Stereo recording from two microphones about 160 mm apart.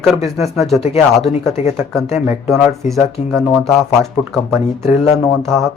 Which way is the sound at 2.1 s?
15° right (ahead or behind).